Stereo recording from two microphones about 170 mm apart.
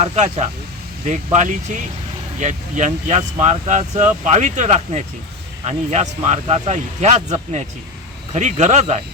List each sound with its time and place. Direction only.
0.0 s speech: 40° right (ahead or behind)